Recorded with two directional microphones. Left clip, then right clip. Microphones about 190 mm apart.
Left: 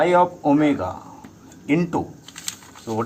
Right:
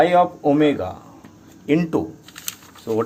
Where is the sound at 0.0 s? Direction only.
30° right (ahead or behind).